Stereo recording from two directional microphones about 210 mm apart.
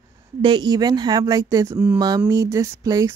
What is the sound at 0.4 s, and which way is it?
A woman's voice, 20° right (ahead or behind).